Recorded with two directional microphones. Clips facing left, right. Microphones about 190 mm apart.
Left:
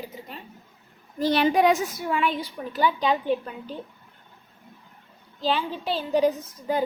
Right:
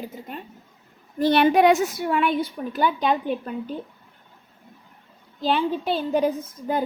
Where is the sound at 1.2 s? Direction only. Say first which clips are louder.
Right 3 dB; 60° right (ahead or behind).